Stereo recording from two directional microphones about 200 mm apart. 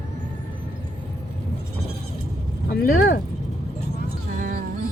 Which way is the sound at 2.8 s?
45° left (ahead or behind).